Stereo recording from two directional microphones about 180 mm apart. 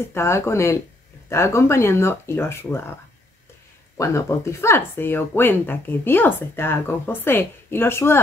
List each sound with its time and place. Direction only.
0.1 s speech: 15° left (ahead or behind)